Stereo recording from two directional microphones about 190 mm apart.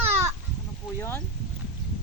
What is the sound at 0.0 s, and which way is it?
Chicken, 10° right (ahead or behind).